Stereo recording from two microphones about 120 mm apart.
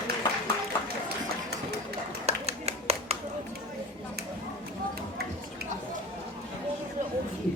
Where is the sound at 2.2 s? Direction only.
60° right (ahead or behind).